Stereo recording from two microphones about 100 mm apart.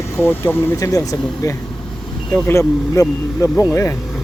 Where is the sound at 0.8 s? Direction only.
35° left (ahead or behind).